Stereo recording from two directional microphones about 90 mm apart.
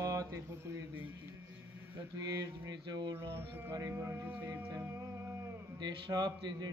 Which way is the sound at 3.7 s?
40° right (ahead or behind).